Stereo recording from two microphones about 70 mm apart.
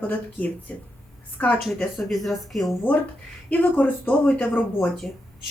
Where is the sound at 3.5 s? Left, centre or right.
Left.